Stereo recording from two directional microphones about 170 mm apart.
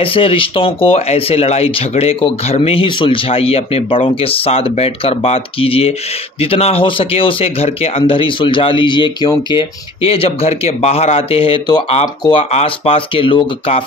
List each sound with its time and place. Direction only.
0.0 s speech: 30° left (ahead or behind)